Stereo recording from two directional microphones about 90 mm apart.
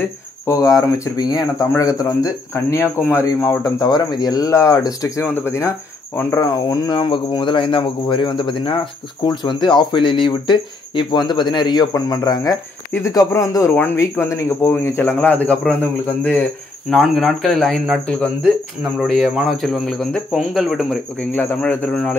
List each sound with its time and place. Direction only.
0.5 s speech: 40° left (ahead or behind)
2.5 s speech: 30° left (ahead or behind)
3.6 s speech: 45° left (ahead or behind)
5.2 s speech: 25° left (ahead or behind)
6.4 s speech: 45° left (ahead or behind)
7.1 s speech: 65° left (ahead or behind)
9.2 s a man's voice: 50° left (ahead or behind); by 16.4 s 20° left (ahead or behind)
16.9 s speech: centre (ahead or behind)
21.2 s a man's voice: 15° left (ahead or behind)